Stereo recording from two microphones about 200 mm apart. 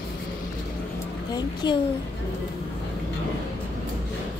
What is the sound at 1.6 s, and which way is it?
Speech, 20° left (ahead or behind).